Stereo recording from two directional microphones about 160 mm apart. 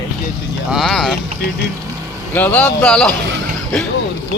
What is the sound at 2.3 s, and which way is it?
Speech, 10° left (ahead or behind).